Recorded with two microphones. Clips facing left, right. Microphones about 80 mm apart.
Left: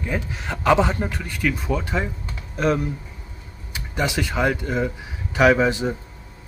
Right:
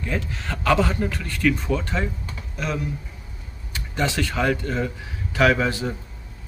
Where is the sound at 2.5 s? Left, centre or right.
Left.